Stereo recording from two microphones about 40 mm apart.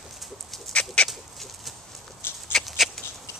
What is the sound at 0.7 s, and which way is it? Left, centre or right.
Chicken, left.